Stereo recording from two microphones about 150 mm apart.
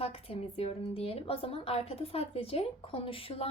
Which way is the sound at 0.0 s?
40° left (ahead or behind).